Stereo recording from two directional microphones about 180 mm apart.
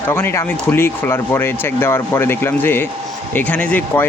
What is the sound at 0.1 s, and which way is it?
Speech, 15° left (ahead or behind).